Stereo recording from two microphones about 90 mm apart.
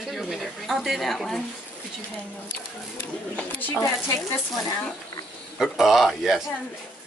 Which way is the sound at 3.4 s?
20° left (ahead or behind).